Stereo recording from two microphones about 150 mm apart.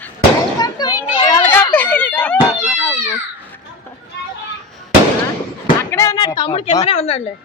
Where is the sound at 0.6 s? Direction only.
25° left (ahead or behind); by 2.4 s 10° left (ahead or behind).